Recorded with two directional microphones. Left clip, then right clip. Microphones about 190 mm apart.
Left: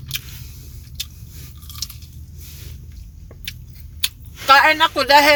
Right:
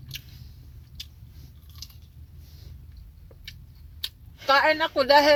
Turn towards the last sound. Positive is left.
turn(degrees=20)  # may be behind; listen again after turning